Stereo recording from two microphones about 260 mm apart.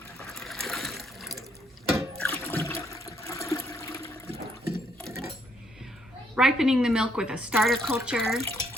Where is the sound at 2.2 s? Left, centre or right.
Centre.